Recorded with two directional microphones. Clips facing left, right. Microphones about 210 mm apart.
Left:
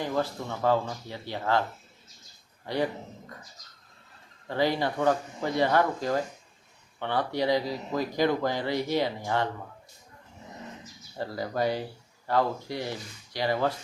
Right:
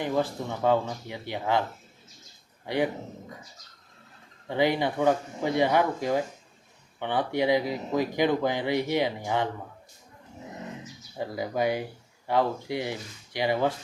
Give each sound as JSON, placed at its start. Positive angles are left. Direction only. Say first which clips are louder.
{"t": 0.0, "sound": "speech", "louder": "right 2 dB", "side_deg": -15}
{"t": 2.6, "sound": "speech", "louder": "right 2 dB", "side_deg": -20}
{"t": 4.4, "sound": "speech", "louder": "right 2 dB", "side_deg": -20}
{"t": 11.2, "sound": "speech", "louder": "right 1 dB", "side_deg": -15}